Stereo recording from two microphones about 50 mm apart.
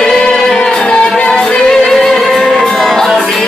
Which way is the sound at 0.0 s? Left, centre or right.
Centre.